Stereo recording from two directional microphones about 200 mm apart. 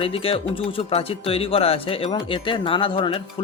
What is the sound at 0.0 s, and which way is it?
Speech, 30° left (ahead or behind).